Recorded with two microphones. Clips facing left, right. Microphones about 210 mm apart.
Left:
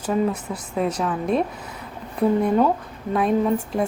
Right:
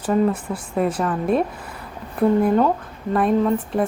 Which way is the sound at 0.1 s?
5° right (ahead or behind).